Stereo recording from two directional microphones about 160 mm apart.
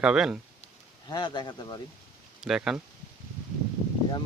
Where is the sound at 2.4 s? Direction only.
5° right (ahead or behind).